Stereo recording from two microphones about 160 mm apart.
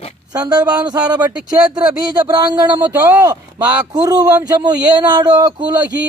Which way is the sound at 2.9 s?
15° right (ahead or behind).